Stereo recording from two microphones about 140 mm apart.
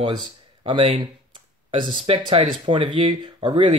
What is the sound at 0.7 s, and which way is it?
Speech, 40° right (ahead or behind).